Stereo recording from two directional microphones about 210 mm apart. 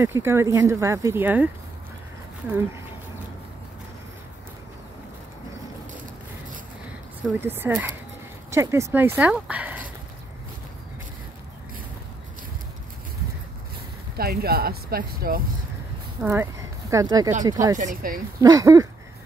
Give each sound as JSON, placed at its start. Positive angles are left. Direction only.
{"t": 0.0, "sound": "speech", "side_deg": -10}
{"t": 7.3, "sound": "speech", "side_deg": -10}
{"t": 14.1, "sound": "speech", "side_deg": -45}
{"t": 16.2, "sound": "speech", "side_deg": -10}
{"t": 17.7, "sound": "speech", "side_deg": -40}
{"t": 18.4, "sound": "speech", "side_deg": -15}